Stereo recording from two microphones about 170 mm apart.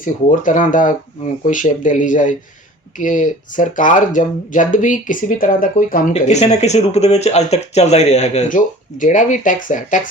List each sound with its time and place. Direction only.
0.0 s speech: 50° left (ahead or behind)